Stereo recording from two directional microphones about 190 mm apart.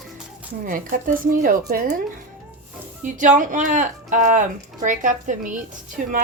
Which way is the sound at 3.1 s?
40° right (ahead or behind).